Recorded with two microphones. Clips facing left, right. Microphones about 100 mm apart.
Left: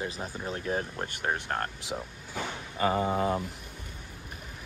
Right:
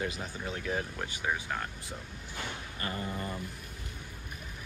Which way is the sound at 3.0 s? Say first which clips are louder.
Left 10 dB; 90° left.